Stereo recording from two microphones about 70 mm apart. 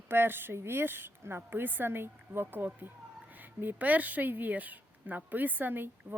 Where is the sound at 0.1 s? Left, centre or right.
Right.